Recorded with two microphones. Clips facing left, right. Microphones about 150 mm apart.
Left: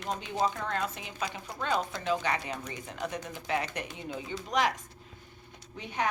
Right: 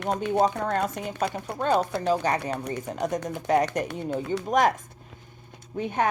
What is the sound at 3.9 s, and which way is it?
Speech, 65° right (ahead or behind).